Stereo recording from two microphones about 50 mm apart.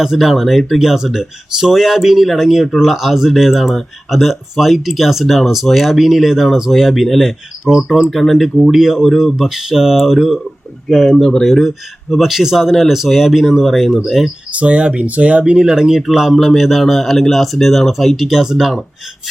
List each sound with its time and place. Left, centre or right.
0.0 s speech: centre
8.1 s speech: centre
11.2 s speech: centre
11.4 s speech: centre
14.5 s speech: right
15.5 s speech: centre